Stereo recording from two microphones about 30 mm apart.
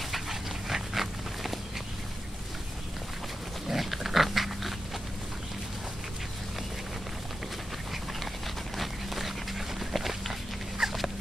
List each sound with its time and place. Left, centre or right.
0.1 s dog: centre
3.6 s pig: centre
8.7 s a sound: centre
9.8 s walk: centre
10.8 s dog: centre